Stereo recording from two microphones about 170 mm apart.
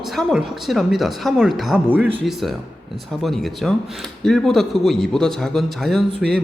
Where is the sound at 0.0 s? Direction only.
Centre (ahead or behind).